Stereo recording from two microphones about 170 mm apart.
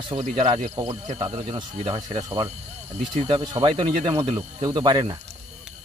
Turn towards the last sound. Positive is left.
turn(degrees=-25)  # may be behind; listen again after turning